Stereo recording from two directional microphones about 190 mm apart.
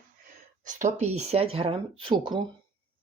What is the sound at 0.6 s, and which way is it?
Speech, 40° right (ahead or behind).